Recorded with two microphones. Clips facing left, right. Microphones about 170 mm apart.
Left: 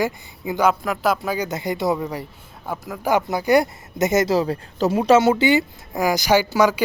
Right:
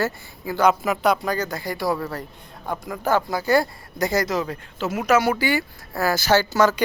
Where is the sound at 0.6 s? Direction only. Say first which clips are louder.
Right 1 dB; centre (ahead or behind).